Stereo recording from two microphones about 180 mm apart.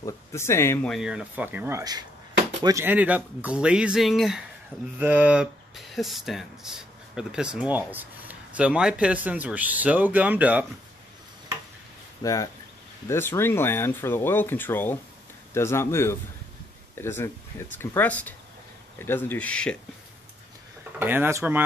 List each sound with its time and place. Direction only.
0.0 s speech: 15° left (ahead or behind)
0.8 s speech: centre (ahead or behind)
12.2 s speech: 20° left (ahead or behind)
21.0 s speech: 10° right (ahead or behind)